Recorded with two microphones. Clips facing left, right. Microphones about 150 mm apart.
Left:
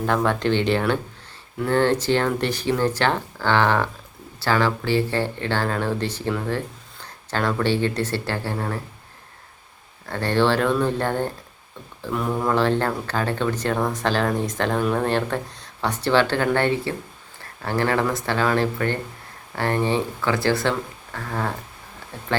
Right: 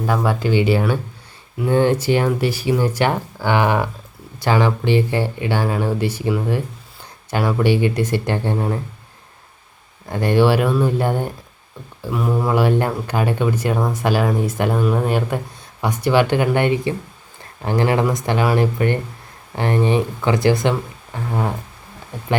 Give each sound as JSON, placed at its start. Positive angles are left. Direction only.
{"t": 0.0, "sound": "speech", "side_deg": -5}
{"t": 10.1, "sound": "speech", "side_deg": -15}